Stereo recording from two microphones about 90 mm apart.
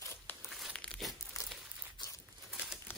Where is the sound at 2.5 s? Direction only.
5° right (ahead or behind).